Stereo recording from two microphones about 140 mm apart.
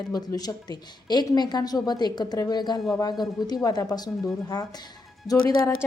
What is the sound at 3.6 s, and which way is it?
A woman's voice, 25° left (ahead or behind).